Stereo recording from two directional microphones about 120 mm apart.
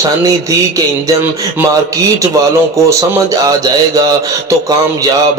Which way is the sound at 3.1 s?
30° right (ahead or behind).